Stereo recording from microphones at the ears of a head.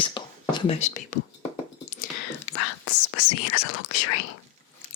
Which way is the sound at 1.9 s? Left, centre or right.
Left.